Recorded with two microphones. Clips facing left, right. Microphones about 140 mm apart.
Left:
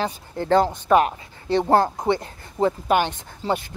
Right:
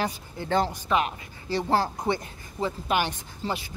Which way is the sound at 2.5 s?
45° left (ahead or behind).